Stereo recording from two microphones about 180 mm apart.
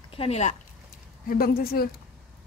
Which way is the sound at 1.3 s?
55° left (ahead or behind).